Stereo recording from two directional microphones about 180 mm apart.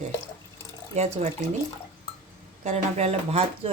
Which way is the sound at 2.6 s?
40° right (ahead or behind).